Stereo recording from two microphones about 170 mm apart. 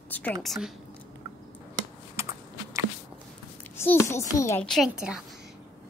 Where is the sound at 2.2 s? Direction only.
15° right (ahead or behind).